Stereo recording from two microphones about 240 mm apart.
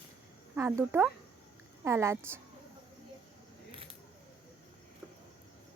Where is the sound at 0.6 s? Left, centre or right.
Centre.